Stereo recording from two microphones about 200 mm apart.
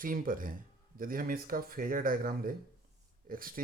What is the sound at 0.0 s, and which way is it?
Speech, 45° right (ahead or behind).